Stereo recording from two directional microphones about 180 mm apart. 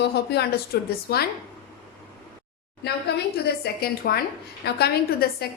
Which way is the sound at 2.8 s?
65° left (ahead or behind).